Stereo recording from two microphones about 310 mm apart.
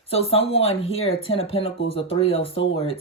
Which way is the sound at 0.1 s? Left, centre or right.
Centre.